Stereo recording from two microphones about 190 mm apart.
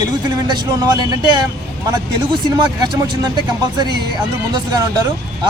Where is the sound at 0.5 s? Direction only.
20° right (ahead or behind).